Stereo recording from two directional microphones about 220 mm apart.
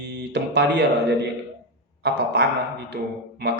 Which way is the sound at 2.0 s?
50° right (ahead or behind).